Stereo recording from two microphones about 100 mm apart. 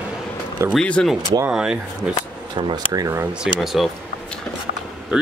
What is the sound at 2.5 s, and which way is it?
Speech, 55° right (ahead or behind).